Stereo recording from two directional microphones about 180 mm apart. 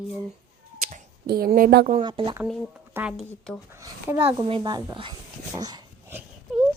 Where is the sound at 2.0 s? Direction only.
30° right (ahead or behind).